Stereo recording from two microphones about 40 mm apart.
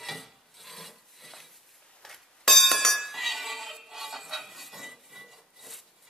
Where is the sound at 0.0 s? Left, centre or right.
Centre.